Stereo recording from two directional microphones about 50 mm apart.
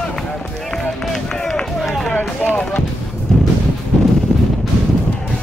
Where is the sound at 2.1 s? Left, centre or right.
Left.